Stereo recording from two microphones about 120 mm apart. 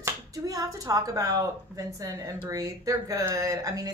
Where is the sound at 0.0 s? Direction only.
30° right (ahead or behind).